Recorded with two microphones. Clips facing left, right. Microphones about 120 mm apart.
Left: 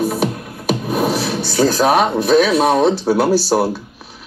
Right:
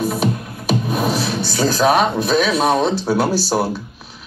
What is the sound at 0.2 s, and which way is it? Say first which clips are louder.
Music: even; 60° left (ahead or behind).